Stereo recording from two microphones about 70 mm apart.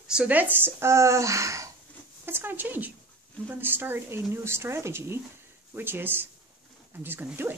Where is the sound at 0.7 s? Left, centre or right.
Right.